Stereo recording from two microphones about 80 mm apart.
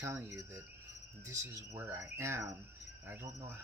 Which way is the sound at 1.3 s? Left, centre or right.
Right.